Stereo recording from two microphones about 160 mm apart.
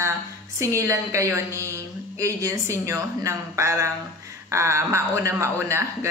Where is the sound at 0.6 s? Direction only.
20° right (ahead or behind).